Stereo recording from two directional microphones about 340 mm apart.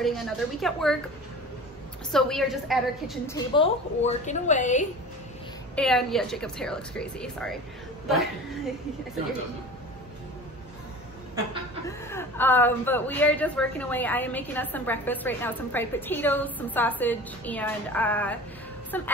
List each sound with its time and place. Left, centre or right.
0.0 s a woman's voice: centre
2.1 s a woman's voice: centre
3.3 s a woman's voice: centre
5.8 s a woman's voice: centre
12.1 s a woman's voice: centre